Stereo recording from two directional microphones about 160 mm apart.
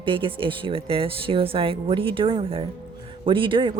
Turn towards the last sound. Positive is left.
turn(degrees=-30)  # may be behind; listen again after turning